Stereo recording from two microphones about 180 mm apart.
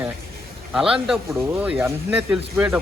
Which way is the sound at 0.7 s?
5° right (ahead or behind).